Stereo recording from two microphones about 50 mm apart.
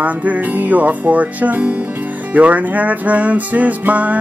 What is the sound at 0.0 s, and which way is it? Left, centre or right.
Music, right.